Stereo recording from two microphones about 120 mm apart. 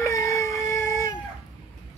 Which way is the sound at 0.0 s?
25° left (ahead or behind).